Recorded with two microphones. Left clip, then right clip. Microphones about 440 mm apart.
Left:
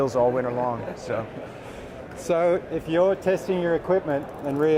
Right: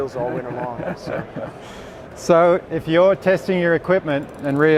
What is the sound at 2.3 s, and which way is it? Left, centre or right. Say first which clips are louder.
Speech: right 7 dB; right.